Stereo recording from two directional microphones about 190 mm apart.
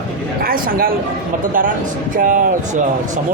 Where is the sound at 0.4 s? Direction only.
50° right (ahead or behind).